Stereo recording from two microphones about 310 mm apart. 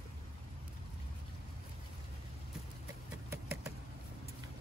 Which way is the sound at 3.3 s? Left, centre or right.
Centre.